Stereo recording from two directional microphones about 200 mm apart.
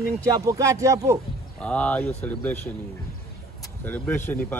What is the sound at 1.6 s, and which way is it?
Speech, 5° left (ahead or behind).